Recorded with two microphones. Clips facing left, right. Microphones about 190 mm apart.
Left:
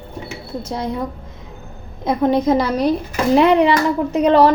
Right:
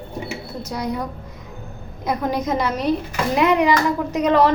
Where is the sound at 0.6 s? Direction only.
25° left (ahead or behind).